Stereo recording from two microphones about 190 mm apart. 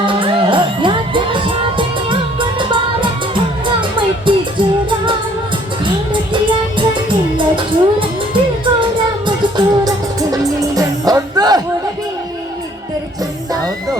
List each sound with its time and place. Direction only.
0.0 s music: 25° right (ahead or behind)
4.3 s music: 25° right (ahead or behind)
6.3 s music: 25° right (ahead or behind)